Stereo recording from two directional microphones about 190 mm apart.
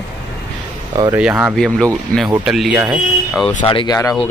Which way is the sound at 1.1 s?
5° right (ahead or behind).